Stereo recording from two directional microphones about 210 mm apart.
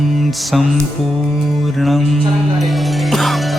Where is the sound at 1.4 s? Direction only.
Centre (ahead or behind).